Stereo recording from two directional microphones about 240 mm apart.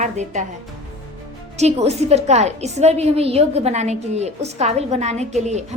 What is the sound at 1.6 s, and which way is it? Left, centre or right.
A woman's voice, right.